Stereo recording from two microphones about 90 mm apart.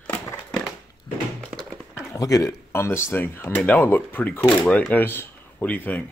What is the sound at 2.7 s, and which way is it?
Speech, 30° left (ahead or behind).